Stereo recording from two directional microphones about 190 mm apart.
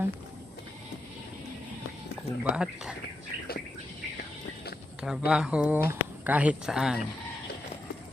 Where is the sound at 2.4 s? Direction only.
5° right (ahead or behind).